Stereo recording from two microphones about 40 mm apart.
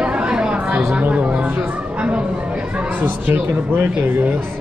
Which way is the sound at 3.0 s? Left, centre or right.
Right.